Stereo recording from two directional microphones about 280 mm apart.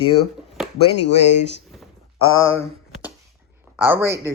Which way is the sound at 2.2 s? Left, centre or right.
Left.